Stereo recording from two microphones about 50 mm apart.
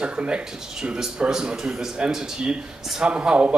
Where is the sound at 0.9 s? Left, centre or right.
Centre.